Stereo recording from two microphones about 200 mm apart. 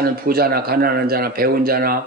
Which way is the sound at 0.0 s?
50° right (ahead or behind).